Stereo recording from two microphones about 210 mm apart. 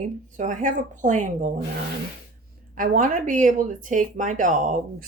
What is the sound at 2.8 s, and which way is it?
Speech, 40° right (ahead or behind).